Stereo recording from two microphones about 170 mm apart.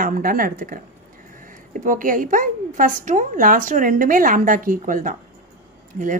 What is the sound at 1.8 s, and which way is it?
A woman's voice, 55° right (ahead or behind).